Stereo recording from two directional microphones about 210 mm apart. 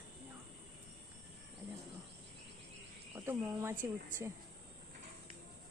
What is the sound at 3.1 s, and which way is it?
Cricket, 10° right (ahead or behind).